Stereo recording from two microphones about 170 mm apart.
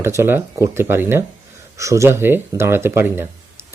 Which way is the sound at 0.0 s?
15° right (ahead or behind).